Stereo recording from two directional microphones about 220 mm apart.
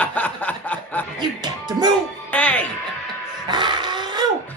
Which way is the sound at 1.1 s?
20° right (ahead or behind).